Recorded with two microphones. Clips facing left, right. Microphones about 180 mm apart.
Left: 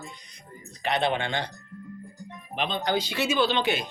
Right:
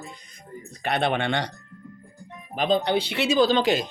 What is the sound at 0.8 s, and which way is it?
Speech, 60° right (ahead or behind).